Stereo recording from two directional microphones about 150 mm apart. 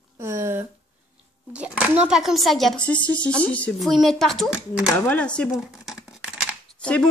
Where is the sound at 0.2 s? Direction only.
15° right (ahead or behind).